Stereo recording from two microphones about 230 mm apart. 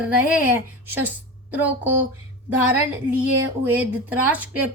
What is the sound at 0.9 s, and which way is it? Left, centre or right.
A woman's voice, centre.